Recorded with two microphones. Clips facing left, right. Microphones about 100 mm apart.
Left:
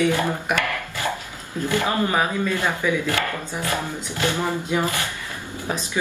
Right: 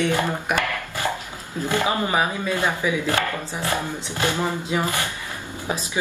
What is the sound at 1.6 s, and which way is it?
Speech, 15° right (ahead or behind).